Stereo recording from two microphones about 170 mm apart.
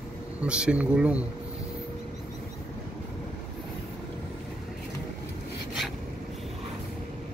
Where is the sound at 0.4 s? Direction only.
5° right (ahead or behind).